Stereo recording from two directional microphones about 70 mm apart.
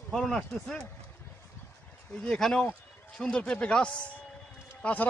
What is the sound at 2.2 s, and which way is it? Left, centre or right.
Speech, centre.